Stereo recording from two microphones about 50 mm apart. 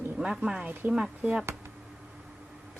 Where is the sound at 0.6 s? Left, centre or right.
Right.